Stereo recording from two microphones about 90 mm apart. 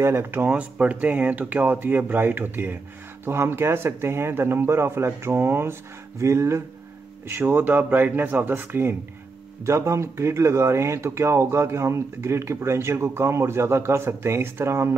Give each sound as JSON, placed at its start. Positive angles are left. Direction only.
{"t": 0.0, "sound": "speech", "side_deg": -30}
{"t": 9.7, "sound": "speech", "side_deg": -35}